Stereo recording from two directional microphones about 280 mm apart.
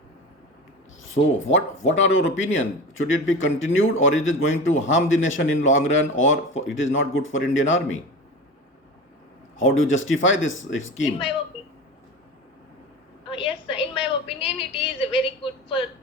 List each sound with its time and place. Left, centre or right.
1.5 s speech: left
9.6 s speech: left
13.3 s a sound: centre